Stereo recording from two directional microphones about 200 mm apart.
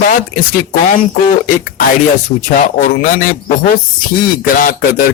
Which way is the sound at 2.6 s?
40° left (ahead or behind).